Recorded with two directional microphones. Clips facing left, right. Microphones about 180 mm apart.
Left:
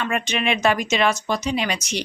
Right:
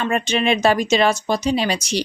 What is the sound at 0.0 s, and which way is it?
A woman's voice, 35° right (ahead or behind).